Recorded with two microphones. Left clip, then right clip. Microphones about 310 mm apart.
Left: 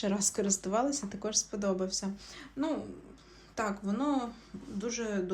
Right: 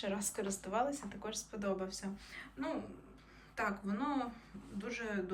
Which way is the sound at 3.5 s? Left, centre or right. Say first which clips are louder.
Left 4 dB; centre.